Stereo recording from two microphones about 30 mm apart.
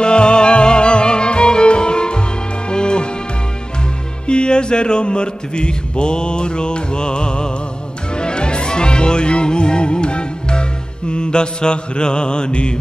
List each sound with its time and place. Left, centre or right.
0.0 s music: left
4.3 s music: left